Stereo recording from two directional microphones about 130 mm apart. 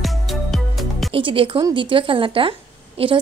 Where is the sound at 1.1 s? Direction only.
45° right (ahead or behind).